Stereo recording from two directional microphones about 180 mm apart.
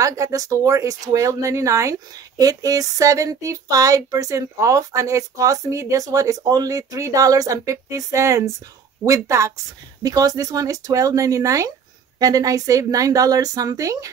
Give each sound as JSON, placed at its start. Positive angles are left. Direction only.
{"t": 0.0, "sound": "a woman's voice", "side_deg": -20}